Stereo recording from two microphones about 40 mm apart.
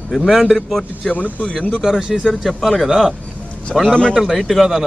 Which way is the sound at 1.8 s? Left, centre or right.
Centre.